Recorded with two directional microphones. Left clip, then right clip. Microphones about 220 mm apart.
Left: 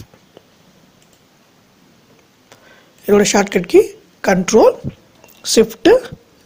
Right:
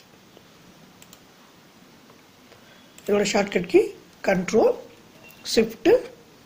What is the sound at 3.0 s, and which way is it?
A woman's voice, 40° left (ahead or behind).